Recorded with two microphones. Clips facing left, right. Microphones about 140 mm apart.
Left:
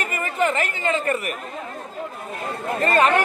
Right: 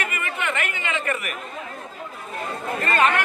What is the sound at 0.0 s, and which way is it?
Chatter, 35° left (ahead or behind).